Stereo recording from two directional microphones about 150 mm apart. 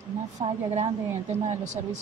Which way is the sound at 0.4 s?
35° right (ahead or behind).